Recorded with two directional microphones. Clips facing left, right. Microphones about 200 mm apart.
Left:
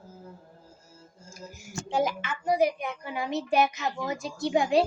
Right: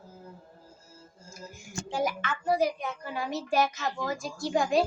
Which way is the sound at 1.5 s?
40° left (ahead or behind).